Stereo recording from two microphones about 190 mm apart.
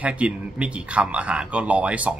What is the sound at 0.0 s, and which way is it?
A man's voice, 5° right (ahead or behind).